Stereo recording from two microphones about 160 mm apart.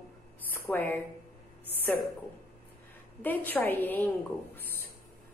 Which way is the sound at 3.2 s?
10° left (ahead or behind).